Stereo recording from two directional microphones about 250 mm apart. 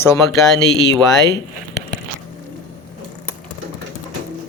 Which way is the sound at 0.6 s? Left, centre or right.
Left.